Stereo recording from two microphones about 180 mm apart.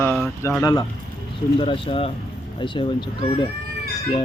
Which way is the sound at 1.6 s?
30° left (ahead or behind).